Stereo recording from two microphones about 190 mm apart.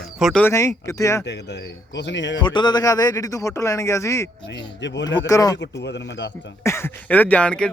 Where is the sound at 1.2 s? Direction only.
65° left (ahead or behind).